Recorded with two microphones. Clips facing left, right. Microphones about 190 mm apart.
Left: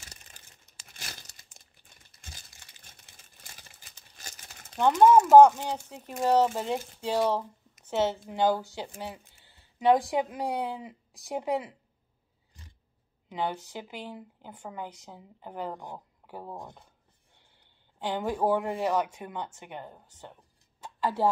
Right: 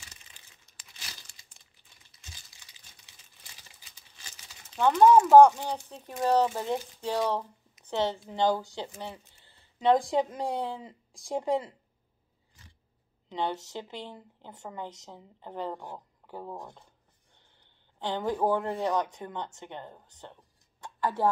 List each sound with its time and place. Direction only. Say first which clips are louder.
0.0 s crumpling: left 3 dB; 45° left (ahead or behind)
4.7 s speech: even; 15° left (ahead or behind)
13.3 s speech: even; 10° left (ahead or behind)
17.9 s speech: even; 10° left (ahead or behind)